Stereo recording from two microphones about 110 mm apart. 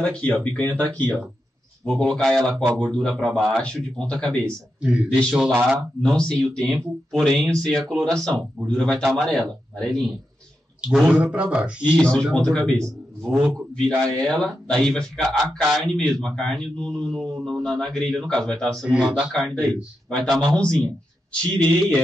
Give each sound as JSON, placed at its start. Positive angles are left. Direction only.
{"t": 0.0, "sound": "a man's voice", "side_deg": 10}
{"t": 1.9, "sound": "a man's voice", "side_deg": 5}
{"t": 4.8, "sound": "a man's voice", "side_deg": -5}
{"t": 5.8, "sound": "a man's voice", "side_deg": 5}
{"t": 10.8, "sound": "a man's voice", "side_deg": -10}
{"t": 12.0, "sound": "a man's voice", "side_deg": 5}
{"t": 13.3, "sound": "a man's voice", "side_deg": -20}
{"t": 13.7, "sound": "a man's voice", "side_deg": 5}
{"t": 18.9, "sound": "a man's voice", "side_deg": -5}